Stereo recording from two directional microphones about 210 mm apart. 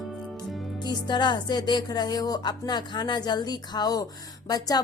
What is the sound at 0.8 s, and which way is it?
A woman's voice, 20° left (ahead or behind).